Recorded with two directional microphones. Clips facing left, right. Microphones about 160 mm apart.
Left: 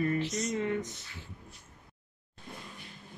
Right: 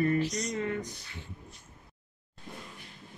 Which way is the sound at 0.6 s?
20° left (ahead or behind).